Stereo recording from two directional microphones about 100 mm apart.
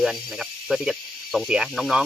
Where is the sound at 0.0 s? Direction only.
Centre (ahead or behind).